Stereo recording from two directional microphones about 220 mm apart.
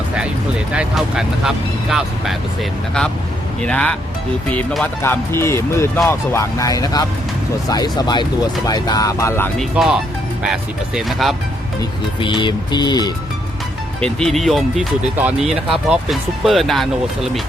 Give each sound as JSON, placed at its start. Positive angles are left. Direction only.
{"t": 0.7, "sound": "speech", "side_deg": -5}
{"t": 3.6, "sound": "speech", "side_deg": 5}
{"t": 9.7, "sound": "speech", "side_deg": 0}
{"t": 11.8, "sound": "speech", "side_deg": 20}
{"t": 14.0, "sound": "speech", "side_deg": 0}